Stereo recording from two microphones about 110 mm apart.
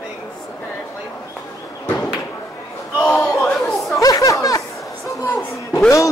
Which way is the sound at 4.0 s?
35° left (ahead or behind).